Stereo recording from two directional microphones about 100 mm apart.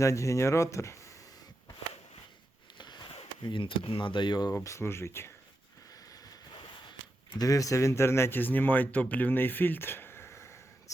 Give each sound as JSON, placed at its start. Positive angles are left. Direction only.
{"t": 0.0, "sound": "speech", "side_deg": 30}
{"t": 2.7, "sound": "a sound", "side_deg": 45}
{"t": 3.4, "sound": "speech", "side_deg": 55}
{"t": 4.5, "sound": "speech", "side_deg": 30}
{"t": 7.3, "sound": "speech", "side_deg": 35}